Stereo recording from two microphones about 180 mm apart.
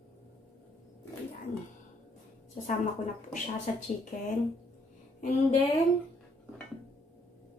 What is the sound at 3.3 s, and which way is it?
Speech, 45° left (ahead or behind).